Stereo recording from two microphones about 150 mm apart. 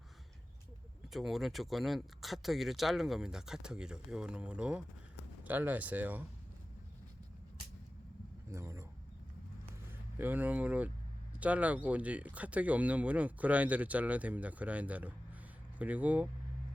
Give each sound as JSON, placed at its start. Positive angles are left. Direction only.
{"t": 1.1, "sound": "speech", "side_deg": 0}
{"t": 8.4, "sound": "a sound", "side_deg": -20}
{"t": 10.2, "sound": "speech", "side_deg": -10}